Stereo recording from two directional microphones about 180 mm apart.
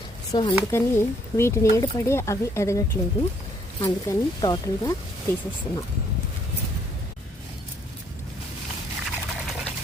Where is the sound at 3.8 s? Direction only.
25° left (ahead or behind).